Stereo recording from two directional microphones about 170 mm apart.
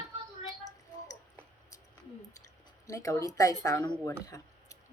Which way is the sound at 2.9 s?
20° left (ahead or behind).